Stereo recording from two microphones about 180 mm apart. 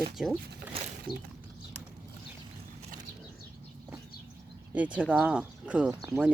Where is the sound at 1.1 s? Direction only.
25° right (ahead or behind).